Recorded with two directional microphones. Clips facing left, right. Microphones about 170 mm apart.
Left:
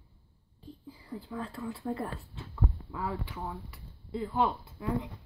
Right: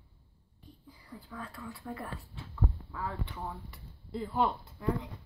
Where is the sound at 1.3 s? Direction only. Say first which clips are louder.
Left 6 dB; 25° left (ahead or behind).